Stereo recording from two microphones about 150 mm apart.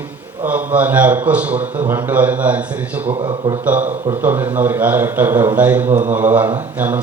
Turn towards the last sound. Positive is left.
turn(degrees=-10)  # may be behind; listen again after turning